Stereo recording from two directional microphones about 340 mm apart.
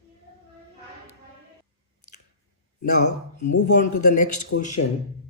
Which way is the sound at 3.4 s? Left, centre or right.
Left.